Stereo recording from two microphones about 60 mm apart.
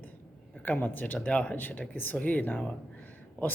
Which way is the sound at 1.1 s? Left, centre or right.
Centre.